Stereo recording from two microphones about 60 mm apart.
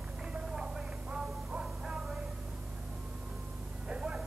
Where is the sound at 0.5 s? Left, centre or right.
Centre.